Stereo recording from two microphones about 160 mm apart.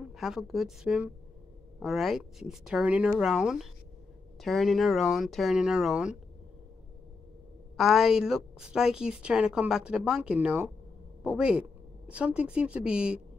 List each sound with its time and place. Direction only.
0.1 s a woman's voice: centre (ahead or behind)
7.7 s a woman's voice: centre (ahead or behind)